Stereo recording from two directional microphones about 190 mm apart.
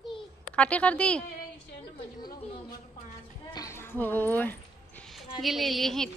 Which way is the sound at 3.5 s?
15° left (ahead or behind).